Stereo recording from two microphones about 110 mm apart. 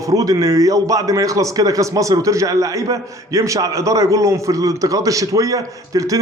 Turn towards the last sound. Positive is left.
turn(degrees=-30)  # may be behind; listen again after turning